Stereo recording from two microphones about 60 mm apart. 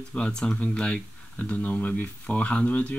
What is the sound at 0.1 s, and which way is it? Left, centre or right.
Speech, centre.